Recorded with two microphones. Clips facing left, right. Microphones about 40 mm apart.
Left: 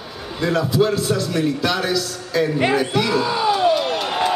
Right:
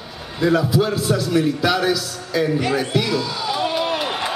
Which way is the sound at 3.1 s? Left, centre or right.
Left.